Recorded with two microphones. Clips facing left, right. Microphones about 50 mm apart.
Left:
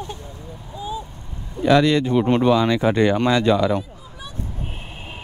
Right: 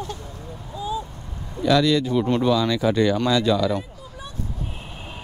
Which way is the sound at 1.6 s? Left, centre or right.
Left.